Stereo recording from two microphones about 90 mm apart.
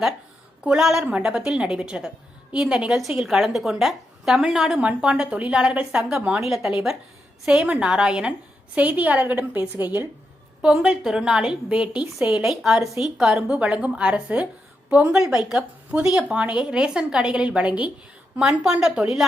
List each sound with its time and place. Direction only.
0.6 s a woman's voice: 10° right (ahead or behind)
10.6 s a woman's voice: 5° right (ahead or behind)